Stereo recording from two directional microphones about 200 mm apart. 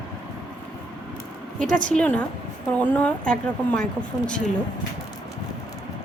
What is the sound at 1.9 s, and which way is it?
Speech, 5° left (ahead or behind).